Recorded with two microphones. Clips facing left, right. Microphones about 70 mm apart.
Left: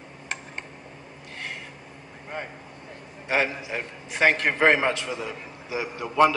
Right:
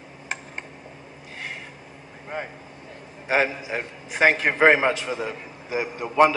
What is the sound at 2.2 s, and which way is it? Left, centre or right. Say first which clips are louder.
Vehicle: right 3 dB; centre.